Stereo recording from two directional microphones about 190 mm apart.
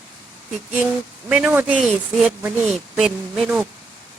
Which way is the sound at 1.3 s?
5° right (ahead or behind).